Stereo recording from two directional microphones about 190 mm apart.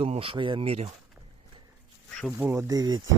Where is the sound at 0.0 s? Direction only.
30° right (ahead or behind).